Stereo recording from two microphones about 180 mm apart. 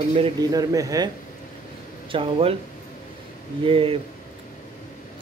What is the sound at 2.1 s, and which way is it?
Speech, 30° right (ahead or behind).